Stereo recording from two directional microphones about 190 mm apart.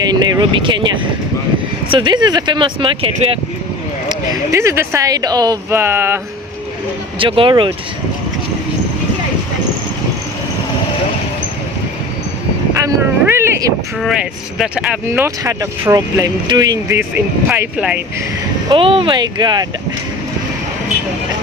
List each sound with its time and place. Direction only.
0.0 s speech: 20° right (ahead or behind)
4.1 s speech: 20° right (ahead or behind)
7.2 s speech: 25° right (ahead or behind)
12.7 s a sound: 15° right (ahead or behind)
14.0 s speech: centre (ahead or behind)
18.7 s speech: 30° right (ahead or behind)